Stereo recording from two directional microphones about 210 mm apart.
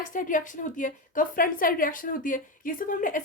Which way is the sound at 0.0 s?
40° left (ahead or behind).